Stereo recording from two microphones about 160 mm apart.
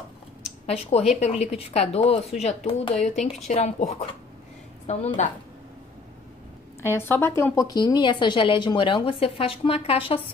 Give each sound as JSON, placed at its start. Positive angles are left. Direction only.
{"t": 0.7, "sound": "a woman's voice", "side_deg": 40}
{"t": 6.9, "sound": "a woman's voice", "side_deg": 15}